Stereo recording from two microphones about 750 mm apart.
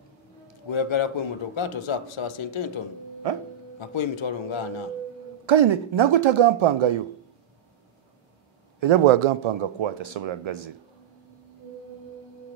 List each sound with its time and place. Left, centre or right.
0.7 s speech: left
3.8 s speech: left
5.5 s a man's voice: right
8.7 s a man's voice: right